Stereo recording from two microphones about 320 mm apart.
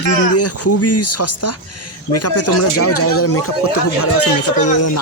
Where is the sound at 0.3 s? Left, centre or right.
Left.